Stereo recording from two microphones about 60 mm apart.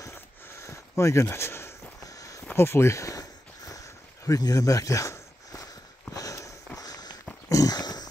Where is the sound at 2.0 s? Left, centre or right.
Left.